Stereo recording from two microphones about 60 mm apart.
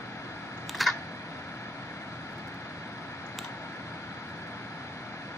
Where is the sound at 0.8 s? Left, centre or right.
Centre.